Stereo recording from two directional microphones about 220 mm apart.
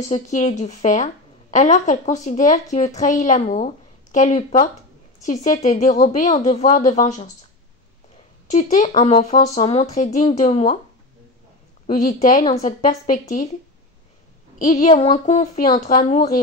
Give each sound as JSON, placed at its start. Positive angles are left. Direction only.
{"t": 0.1, "sound": "speech", "side_deg": 30}
{"t": 8.5, "sound": "speech", "side_deg": 30}
{"t": 11.9, "sound": "speech", "side_deg": 40}
{"t": 14.7, "sound": "speech", "side_deg": 30}